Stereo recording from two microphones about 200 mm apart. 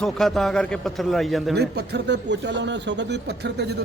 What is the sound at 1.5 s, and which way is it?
Speech, 55° right (ahead or behind).